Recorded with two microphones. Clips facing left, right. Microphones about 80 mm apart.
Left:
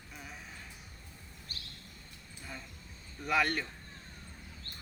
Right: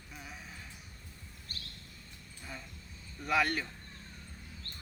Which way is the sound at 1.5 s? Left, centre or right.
Right.